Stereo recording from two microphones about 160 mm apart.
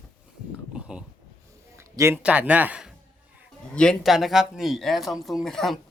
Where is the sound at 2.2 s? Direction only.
10° right (ahead or behind).